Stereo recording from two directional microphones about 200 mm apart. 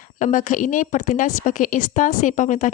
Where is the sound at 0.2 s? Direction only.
40° left (ahead or behind).